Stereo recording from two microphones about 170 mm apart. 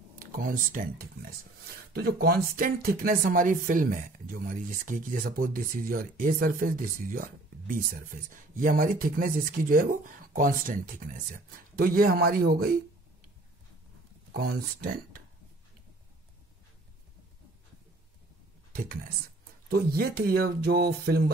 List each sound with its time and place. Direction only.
0.1 s speech: 55° right (ahead or behind)
14.3 s speech: 65° right (ahead or behind)
18.7 s speech: 55° right (ahead or behind)